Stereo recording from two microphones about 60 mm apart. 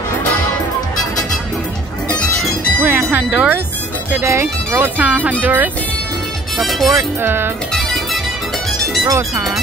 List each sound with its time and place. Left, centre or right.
2.8 s music: right
3.3 s speech: right
4.2 s speech: right
6.6 s speech: centre
7.2 s speech: right
7.7 s music: centre
9.0 s speech: right